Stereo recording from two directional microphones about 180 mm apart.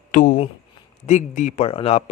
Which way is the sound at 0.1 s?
50° left (ahead or behind).